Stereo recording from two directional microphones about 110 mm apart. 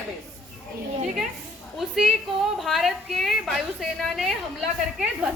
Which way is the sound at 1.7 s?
5° right (ahead or behind).